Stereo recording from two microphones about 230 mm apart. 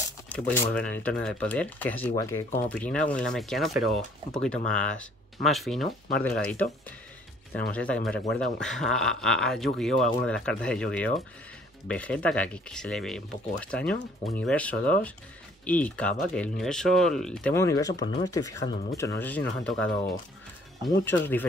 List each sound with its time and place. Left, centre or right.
0.3 s speech: centre